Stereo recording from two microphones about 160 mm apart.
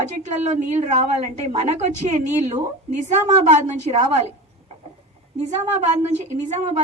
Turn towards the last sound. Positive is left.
turn(degrees=-50)  # may be behind; listen again after turning